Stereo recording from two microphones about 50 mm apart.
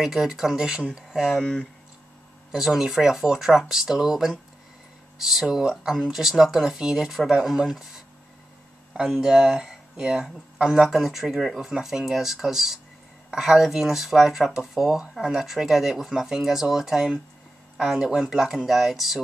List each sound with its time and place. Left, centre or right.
0.0 s speech: centre
1.4 s speech: left
2.5 s speech: centre